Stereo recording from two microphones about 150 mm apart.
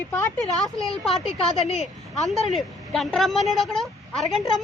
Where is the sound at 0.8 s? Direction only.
Centre (ahead or behind).